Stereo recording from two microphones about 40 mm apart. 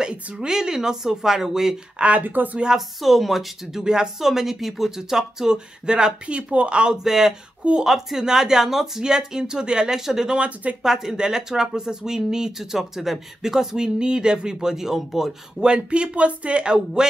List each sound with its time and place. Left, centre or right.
0.0 s a sound: right
0.5 s speech: centre
2.0 s speech: right
3.0 s speech: centre
3.8 s speech: centre
4.2 s speech: centre; by 7.0 s right
7.0 s speech: centre
10.3 s speech: right
10.8 s speech: centre
15.6 s speech: right